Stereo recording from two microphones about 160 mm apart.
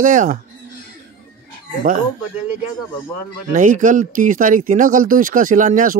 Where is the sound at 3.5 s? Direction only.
55° right (ahead or behind).